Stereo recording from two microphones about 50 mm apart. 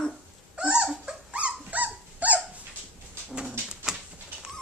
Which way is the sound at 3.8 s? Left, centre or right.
Centre.